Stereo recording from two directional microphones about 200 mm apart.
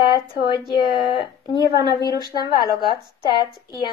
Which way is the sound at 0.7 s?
20° left (ahead or behind).